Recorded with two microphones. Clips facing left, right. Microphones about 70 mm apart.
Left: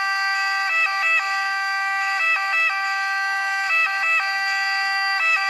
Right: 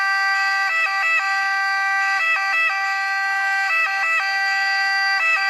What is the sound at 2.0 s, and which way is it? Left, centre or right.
Emergency vehicle, right.